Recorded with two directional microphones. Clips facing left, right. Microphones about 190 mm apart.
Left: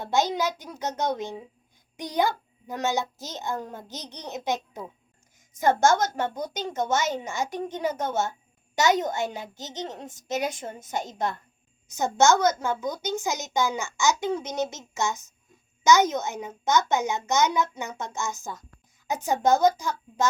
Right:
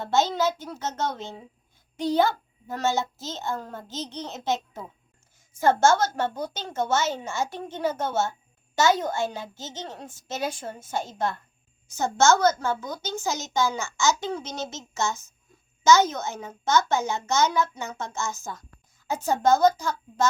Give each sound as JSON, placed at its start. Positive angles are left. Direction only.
{"t": 0.0, "sound": "a woman's voice", "side_deg": 15}